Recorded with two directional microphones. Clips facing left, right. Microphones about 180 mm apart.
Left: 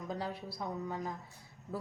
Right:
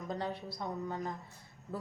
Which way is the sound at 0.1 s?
5° left (ahead or behind).